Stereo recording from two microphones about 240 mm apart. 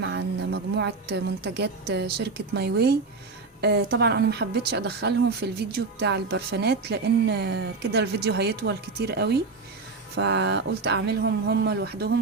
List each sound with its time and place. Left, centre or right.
0.0 s speech: right